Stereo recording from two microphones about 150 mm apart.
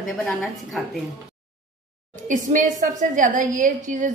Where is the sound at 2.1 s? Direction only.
60° right (ahead or behind).